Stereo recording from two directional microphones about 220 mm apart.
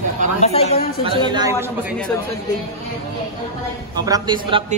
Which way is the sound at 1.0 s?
20° right (ahead or behind).